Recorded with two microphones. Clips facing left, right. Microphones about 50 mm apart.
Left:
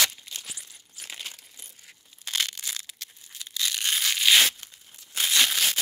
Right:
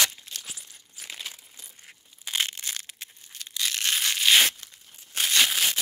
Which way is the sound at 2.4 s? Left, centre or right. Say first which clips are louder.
Right 1 dB; right.